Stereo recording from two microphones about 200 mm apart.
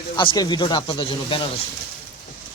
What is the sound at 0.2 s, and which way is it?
Speech, 25° left (ahead or behind).